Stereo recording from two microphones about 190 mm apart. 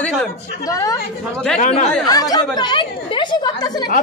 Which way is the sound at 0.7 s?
15° left (ahead or behind).